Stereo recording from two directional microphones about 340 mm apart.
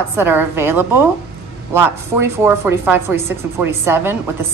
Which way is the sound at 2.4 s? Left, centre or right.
Centre.